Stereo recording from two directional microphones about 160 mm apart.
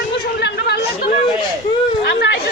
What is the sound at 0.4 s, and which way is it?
Chatter, 90° left.